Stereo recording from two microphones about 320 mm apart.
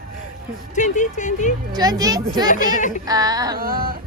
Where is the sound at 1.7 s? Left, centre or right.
Centre.